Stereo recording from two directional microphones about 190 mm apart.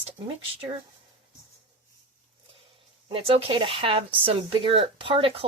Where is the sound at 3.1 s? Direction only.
30° right (ahead or behind).